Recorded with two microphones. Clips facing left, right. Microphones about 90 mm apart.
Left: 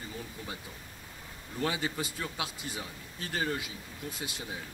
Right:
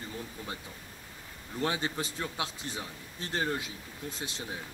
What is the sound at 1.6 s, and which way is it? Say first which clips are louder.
Speech: right 1 dB; 25° right (ahead or behind).